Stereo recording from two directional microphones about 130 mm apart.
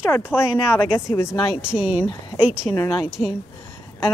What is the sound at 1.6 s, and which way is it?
A woman's voice, 10° right (ahead or behind).